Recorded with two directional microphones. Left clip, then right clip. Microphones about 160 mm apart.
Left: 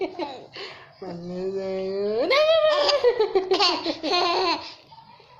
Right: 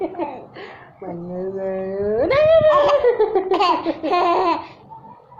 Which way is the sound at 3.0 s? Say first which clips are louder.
Right 4 dB; 30° left (ahead or behind).